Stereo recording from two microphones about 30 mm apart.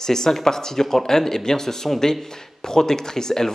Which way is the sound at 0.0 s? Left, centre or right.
Centre.